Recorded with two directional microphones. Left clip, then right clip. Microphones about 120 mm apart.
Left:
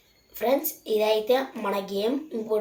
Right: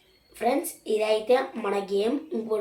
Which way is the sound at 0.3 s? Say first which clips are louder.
Left 1 dB; 35° right (ahead or behind).